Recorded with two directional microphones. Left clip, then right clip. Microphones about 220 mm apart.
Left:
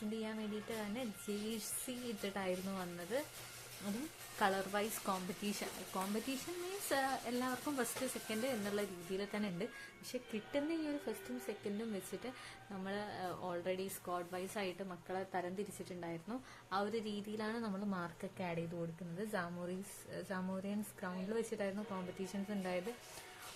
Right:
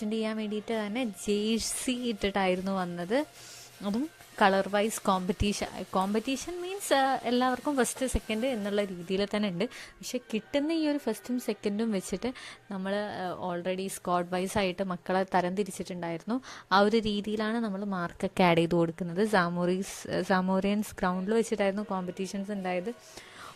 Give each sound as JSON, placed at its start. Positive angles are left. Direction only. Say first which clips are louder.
{"t": 0.1, "sound": "speech", "louder": "right 12 dB", "side_deg": -40}
{"t": 4.4, "sound": "speech", "louder": "right 12 dB", "side_deg": -35}